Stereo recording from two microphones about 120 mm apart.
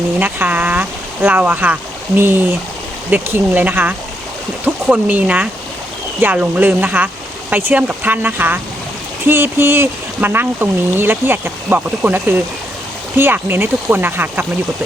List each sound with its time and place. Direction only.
0.2 s speech: 15° right (ahead or behind)